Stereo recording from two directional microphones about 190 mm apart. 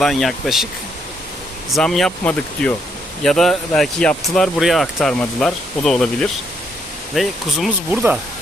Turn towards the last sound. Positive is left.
turn(degrees=0)  # may be behind; listen again after turning